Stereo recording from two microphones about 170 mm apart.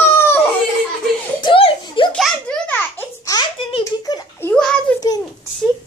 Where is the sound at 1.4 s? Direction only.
30° left (ahead or behind).